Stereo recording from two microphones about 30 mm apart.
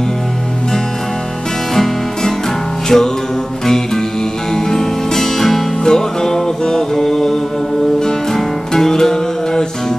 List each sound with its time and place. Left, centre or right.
2.9 s music: centre